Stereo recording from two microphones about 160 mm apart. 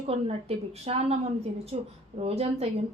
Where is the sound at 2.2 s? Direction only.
40° right (ahead or behind).